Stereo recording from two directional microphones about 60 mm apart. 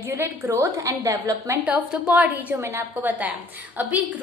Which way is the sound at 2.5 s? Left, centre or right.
Right.